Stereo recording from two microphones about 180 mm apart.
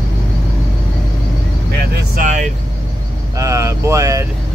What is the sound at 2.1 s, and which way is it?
Vehicle, 45° right (ahead or behind).